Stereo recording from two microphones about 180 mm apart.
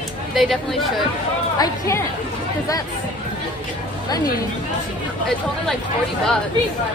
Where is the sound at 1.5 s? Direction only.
20° left (ahead or behind).